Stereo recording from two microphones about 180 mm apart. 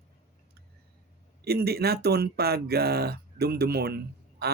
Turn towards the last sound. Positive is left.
turn(degrees=-60)  # may be behind; listen again after turning